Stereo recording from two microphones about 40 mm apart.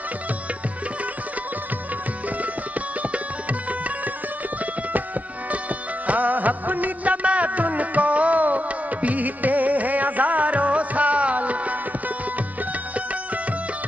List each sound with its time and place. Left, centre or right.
3.0 s sitar: right
5.5 s music: right
12.9 s music: right